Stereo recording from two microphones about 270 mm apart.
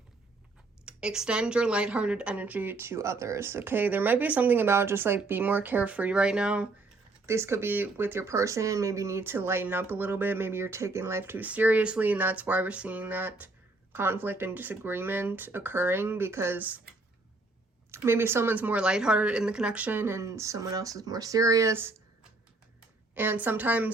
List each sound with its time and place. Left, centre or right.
0.9 s speech: centre
17.9 s speech: centre
23.1 s speech: centre